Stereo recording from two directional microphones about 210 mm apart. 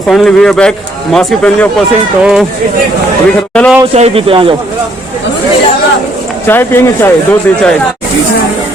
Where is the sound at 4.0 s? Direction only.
30° right (ahead or behind).